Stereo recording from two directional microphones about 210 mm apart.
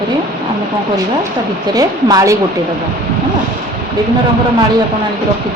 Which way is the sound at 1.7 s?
15° right (ahead or behind).